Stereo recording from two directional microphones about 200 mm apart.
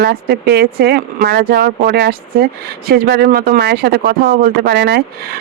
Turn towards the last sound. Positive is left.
turn(degrees=-55)  # may be behind; listen again after turning